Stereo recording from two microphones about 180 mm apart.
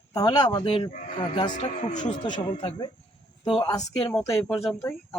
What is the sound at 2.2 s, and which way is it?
Speech, 25° left (ahead or behind).